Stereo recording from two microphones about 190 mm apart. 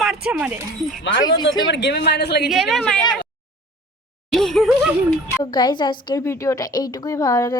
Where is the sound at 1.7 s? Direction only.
65° left (ahead or behind).